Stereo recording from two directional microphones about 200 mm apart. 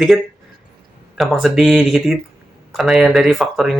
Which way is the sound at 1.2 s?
Centre (ahead or behind).